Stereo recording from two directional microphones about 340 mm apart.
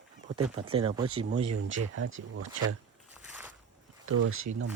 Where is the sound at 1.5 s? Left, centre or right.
Right.